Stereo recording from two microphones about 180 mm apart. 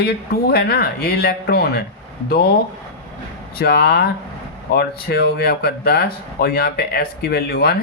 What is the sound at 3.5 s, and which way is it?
Speech, 60° left (ahead or behind).